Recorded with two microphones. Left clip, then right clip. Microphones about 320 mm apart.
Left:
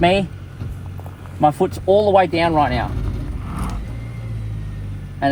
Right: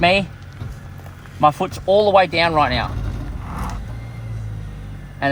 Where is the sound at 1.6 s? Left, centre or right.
Right.